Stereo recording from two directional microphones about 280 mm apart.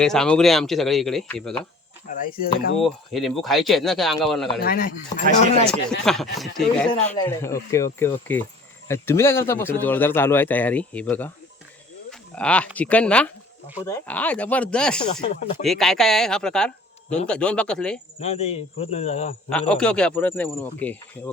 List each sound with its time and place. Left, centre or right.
0.0 s speech: centre
2.1 s speech: left
2.8 s speech: centre
4.6 s speech: left
5.6 s a man's voice: centre
12.3 s speech: centre
15.0 s speech: centre
15.6 s speech: centre
18.2 s speech: left
19.5 s a man's voice: centre